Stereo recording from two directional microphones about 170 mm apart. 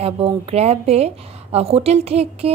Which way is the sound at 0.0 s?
35° right (ahead or behind).